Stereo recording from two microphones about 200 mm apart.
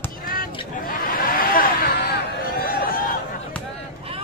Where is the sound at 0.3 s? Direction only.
45° left (ahead or behind).